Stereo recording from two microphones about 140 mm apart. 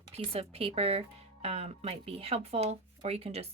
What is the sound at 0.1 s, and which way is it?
Speech, 45° right (ahead or behind).